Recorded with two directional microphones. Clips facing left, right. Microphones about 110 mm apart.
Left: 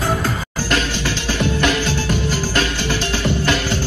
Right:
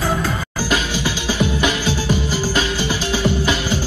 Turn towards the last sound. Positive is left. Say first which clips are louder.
# even
turn(degrees=-5)  # may be behind; listen again after turning